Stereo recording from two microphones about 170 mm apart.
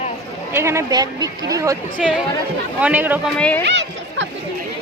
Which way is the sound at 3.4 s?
10° left (ahead or behind).